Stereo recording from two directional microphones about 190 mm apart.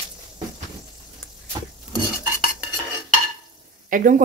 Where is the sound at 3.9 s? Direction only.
45° right (ahead or behind).